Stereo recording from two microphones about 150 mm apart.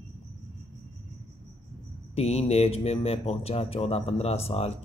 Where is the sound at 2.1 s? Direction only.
45° left (ahead or behind).